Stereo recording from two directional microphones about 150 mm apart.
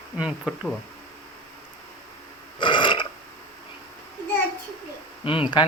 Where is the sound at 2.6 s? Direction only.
30° left (ahead or behind).